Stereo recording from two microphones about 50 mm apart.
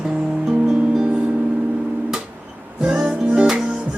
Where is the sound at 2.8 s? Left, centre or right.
Centre.